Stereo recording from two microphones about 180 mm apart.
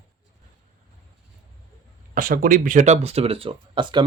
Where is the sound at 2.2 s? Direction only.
50° right (ahead or behind); by 4.0 s 25° right (ahead or behind).